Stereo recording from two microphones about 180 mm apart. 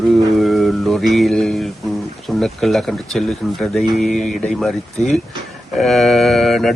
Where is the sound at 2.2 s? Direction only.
Centre (ahead or behind).